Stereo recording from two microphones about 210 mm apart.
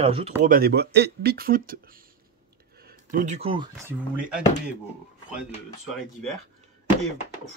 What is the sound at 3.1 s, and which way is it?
Speech, 35° right (ahead or behind).